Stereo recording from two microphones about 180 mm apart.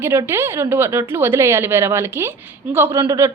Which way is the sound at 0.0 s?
15° right (ahead or behind).